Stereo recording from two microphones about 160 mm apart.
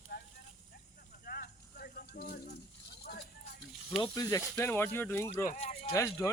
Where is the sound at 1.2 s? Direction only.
70° left (ahead or behind).